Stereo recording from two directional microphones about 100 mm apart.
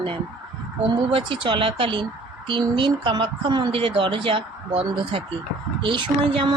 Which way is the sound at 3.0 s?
50° right (ahead or behind).